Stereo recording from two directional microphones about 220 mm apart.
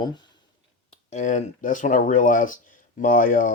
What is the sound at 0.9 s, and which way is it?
Speech, 35° left (ahead or behind).